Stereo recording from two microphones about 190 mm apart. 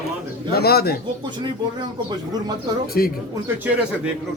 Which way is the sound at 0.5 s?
55° left (ahead or behind).